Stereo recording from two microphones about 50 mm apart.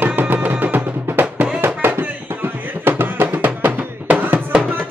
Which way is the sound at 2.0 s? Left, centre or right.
Right.